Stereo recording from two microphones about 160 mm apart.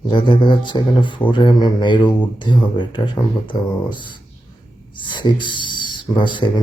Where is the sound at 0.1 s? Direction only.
30° left (ahead or behind).